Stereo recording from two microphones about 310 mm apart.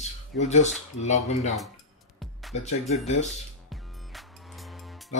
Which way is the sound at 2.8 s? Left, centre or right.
Left.